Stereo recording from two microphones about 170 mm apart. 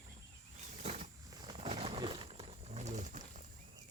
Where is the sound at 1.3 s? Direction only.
25° right (ahead or behind); by 3.4 s 45° right (ahead or behind).